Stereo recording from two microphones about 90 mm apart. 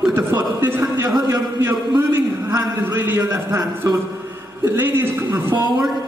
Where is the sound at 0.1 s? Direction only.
25° right (ahead or behind).